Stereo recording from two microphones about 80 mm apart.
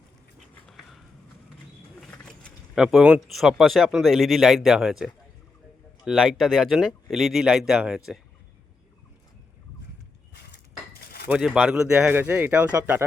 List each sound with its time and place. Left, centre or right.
2.7 s speech: centre
11.3 s speech: centre
12.1 s speech: right